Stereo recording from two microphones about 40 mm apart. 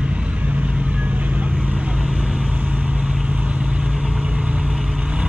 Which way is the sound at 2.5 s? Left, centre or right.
Right.